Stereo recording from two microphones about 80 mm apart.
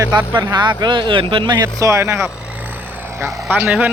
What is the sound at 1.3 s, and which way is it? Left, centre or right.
Speech, right.